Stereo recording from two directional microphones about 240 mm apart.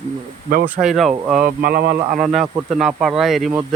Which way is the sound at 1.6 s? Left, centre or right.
Right.